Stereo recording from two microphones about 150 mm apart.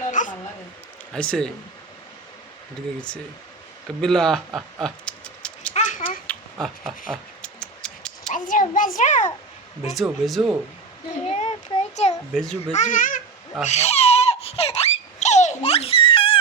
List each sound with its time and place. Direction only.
0.2 s a sound: 60° left (ahead or behind)
1.1 s speech: 5° left (ahead or behind)
4.0 s speech: 5° left (ahead or behind)
5.7 s a sound: 55° left (ahead or behind)
6.2 s a sound: centre (ahead or behind)
8.3 s a child's voice: 60° left (ahead or behind)
9.8 s speech: centre (ahead or behind)
11.3 s a child's voice: 45° left (ahead or behind)
12.3 s speech: 5° left (ahead or behind)
12.7 s a child's voice: 55° left (ahead or behind)
13.7 s baby laughter: 45° left (ahead or behind)